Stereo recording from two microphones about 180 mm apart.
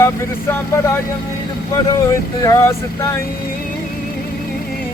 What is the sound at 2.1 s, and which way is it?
Music, 15° left (ahead or behind).